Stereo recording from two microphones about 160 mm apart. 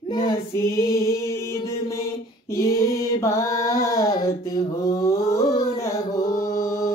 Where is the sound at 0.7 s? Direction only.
15° left (ahead or behind).